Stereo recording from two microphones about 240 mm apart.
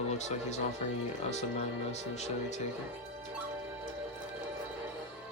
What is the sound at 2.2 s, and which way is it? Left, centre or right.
Speech, left.